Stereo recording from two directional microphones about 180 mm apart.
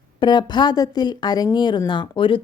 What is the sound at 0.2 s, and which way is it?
A woman's voice, 25° left (ahead or behind).